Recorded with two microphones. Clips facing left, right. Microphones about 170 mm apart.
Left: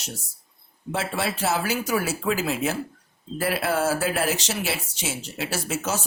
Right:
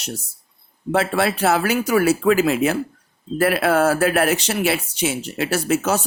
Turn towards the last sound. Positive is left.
turn(degrees=-60)  # may be behind; listen again after turning